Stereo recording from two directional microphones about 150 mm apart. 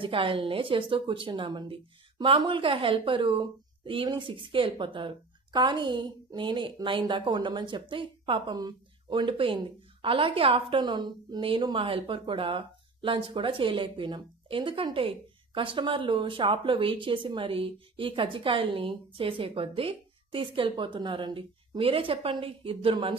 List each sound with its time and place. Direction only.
0.0 s a woman's voice: 35° right (ahead or behind)